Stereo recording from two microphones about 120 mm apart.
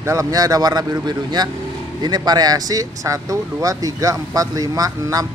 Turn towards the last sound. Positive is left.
turn(degrees=-30)  # may be behind; listen again after turning